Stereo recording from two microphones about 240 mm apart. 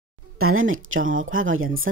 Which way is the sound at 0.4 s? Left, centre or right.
Right.